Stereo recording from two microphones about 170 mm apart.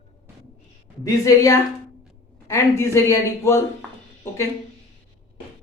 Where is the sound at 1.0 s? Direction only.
20° left (ahead or behind).